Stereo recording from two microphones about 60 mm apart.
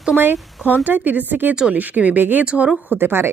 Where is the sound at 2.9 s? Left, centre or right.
Right.